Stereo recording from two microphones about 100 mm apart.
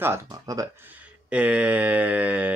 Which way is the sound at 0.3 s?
35° right (ahead or behind).